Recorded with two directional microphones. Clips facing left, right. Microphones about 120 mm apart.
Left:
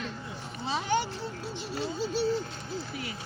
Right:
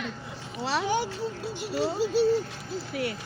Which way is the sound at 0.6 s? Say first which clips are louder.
Right 5 dB; 90° right.